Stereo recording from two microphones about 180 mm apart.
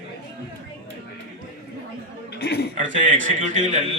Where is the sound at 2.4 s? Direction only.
60° left (ahead or behind).